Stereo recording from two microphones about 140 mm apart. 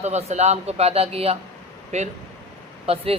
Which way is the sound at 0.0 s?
50° right (ahead or behind).